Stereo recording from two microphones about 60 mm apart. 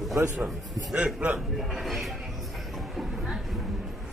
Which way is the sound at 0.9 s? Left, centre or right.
Right.